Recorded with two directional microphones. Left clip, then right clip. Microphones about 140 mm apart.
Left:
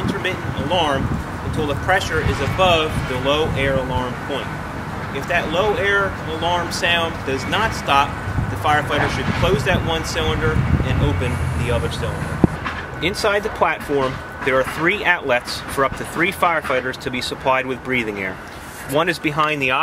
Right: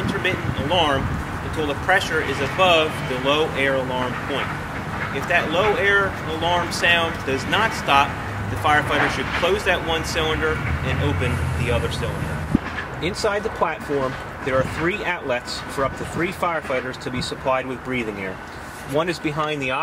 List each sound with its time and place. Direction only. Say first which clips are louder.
0.0 s a sound: even; centre (ahead or behind)
1.6 s speech: left 1 dB; centre (ahead or behind)
13.0 s speech: left 4 dB; 20° left (ahead or behind)